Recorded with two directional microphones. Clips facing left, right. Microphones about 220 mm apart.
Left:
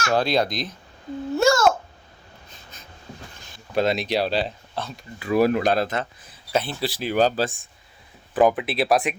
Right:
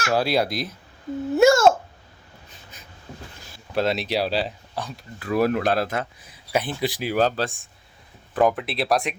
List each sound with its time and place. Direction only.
0.1 s speech: 5° right (ahead or behind)
1.4 s babbling: 25° right (ahead or behind)
3.4 s speech: 5° right (ahead or behind)
5.2 s speech: centre (ahead or behind)
7.1 s speech: centre (ahead or behind)